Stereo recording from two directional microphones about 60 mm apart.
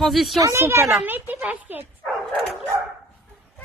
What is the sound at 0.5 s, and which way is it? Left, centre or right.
Speech, right.